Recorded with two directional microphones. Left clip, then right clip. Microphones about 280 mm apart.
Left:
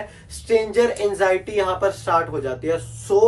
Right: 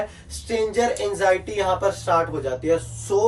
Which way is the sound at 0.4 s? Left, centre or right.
Centre.